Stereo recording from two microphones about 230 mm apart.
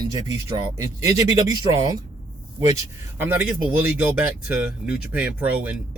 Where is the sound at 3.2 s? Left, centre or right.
Centre.